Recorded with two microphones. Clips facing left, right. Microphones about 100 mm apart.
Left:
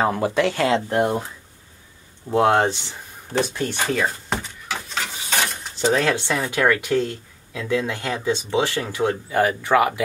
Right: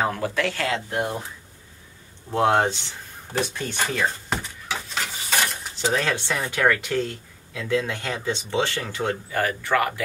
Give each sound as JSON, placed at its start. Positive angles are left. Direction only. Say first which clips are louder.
{"t": 0.0, "sound": "speech", "louder": "left 4 dB", "side_deg": 20}
{"t": 0.8, "sound": "speech", "louder": "left 6 dB", "side_deg": 35}
{"t": 2.3, "sound": "speech", "louder": "left 3 dB", "side_deg": 15}
{"t": 3.7, "sound": "a sound", "louder": "left 1 dB", "side_deg": 5}
{"t": 5.9, "sound": "speech", "louder": "left 4 dB", "side_deg": 20}